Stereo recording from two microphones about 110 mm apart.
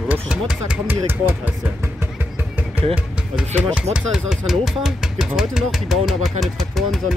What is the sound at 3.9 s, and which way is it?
Speech, 5° right (ahead or behind).